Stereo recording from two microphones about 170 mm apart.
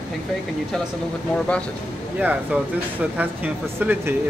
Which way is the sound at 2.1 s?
10° right (ahead or behind).